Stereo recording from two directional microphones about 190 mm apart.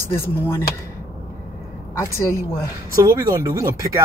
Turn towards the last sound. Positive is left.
turn(degrees=-15)  # may be behind; listen again after turning